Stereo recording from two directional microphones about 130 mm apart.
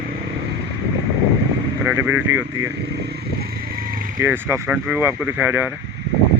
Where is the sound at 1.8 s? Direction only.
15° right (ahead or behind).